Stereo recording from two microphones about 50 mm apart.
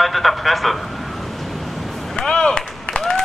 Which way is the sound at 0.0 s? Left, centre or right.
Centre.